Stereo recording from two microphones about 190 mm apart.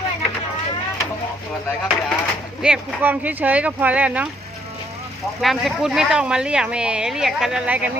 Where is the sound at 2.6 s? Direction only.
5° right (ahead or behind).